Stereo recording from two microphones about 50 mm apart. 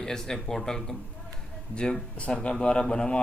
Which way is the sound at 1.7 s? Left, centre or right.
Centre.